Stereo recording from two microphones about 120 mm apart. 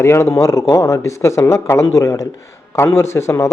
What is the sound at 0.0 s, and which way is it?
A man's voice, 20° left (ahead or behind).